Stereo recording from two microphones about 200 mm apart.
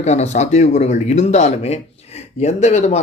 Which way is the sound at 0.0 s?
35° left (ahead or behind).